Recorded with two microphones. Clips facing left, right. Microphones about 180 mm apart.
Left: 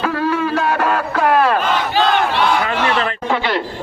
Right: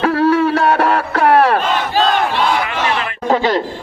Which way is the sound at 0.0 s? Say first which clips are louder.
Right 5 dB; 70° right (ahead or behind).